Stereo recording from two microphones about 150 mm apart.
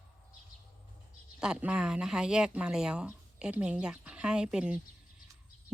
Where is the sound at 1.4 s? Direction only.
5° right (ahead or behind).